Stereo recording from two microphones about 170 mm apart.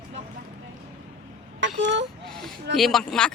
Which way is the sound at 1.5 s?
90° right.